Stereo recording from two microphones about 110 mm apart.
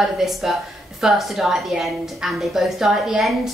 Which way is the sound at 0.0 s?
Centre (ahead or behind).